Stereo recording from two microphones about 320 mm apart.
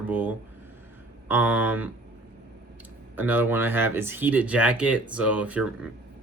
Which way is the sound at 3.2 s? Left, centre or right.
Centre.